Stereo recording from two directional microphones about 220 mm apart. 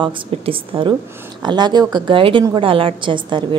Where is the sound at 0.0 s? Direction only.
25° right (ahead or behind).